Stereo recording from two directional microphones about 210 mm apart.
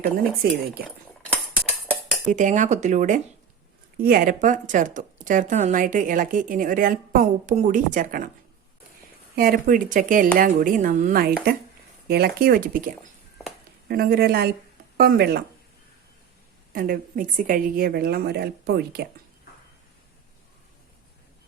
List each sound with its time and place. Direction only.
0.4 s a woman's voice: 45° right (ahead or behind)
0.9 s cutlery: 5° left (ahead or behind)
2.3 s speech: 35° right (ahead or behind)
9.3 s a woman's voice: 45° right (ahead or behind)
16.7 s a woman's voice: 45° right (ahead or behind)